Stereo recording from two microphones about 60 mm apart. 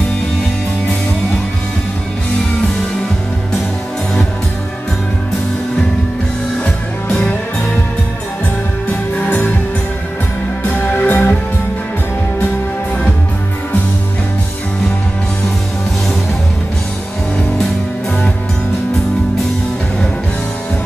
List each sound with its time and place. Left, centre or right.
10.7 s music: left